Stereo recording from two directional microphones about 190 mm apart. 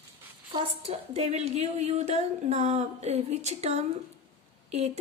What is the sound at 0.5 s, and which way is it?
Speech, 30° right (ahead or behind).